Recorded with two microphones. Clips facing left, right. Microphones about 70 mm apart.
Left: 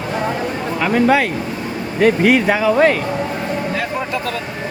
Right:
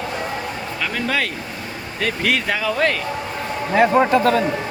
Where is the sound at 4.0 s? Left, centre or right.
Right.